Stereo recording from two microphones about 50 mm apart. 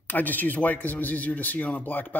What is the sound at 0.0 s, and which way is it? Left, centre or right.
Speech, left.